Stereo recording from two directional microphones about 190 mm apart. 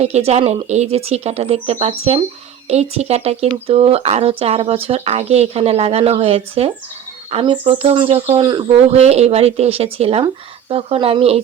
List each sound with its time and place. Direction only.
0.0 s speech: 35° right (ahead or behind)